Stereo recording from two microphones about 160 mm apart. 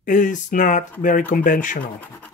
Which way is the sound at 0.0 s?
55° left (ahead or behind).